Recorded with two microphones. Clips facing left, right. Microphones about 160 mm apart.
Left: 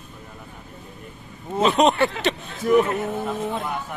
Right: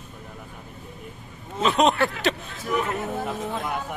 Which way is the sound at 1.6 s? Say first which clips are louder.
Left 2 dB; centre (ahead or behind).